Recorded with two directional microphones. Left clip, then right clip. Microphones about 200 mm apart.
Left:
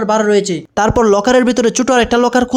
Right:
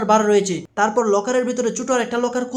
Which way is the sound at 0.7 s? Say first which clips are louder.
Left 6 dB; 50° left (ahead or behind).